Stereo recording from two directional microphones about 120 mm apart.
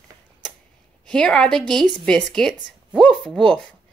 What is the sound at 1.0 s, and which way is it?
Speech, 5° left (ahead or behind).